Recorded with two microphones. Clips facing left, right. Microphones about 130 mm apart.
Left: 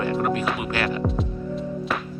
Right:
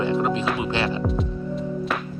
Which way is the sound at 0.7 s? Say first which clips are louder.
Right 1 dB; 25° right (ahead or behind).